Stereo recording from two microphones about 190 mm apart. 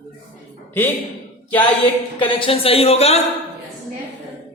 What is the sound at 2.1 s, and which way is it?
Speech, 25° left (ahead or behind).